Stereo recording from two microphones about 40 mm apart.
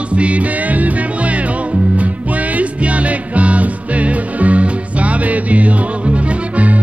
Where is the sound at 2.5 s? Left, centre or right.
Right.